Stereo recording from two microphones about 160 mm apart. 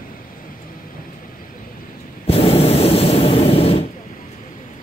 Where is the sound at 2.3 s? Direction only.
40° left (ahead or behind).